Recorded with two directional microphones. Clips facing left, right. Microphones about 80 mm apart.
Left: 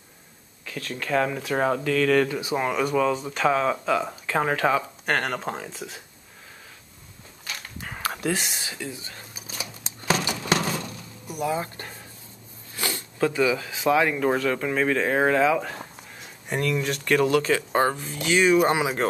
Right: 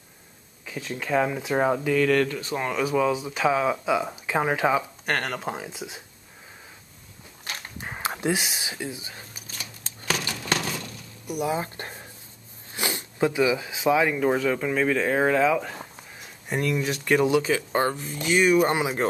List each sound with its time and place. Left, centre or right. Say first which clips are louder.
0.7 s speech: even; centre
2.0 s speech: left 1 dB; centre
5.0 s speech: left 2 dB; centre
7.4 s a sound: right 1 dB; right
8.4 s speech: right 1 dB; centre
8.6 s speech: right 1 dB; centre
9.5 s scissors: left 6 dB; centre
10.6 s a sound: left 4 dB; left
11.2 s speech: right 1 dB; centre
11.5 s speech: even; right; by 17.6 s centre
17.7 s speech: left 2 dB; centre